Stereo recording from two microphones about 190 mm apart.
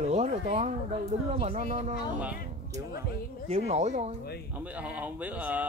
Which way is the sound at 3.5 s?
35° right (ahead or behind).